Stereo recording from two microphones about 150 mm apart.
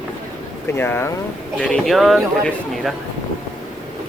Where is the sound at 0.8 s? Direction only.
15° left (ahead or behind).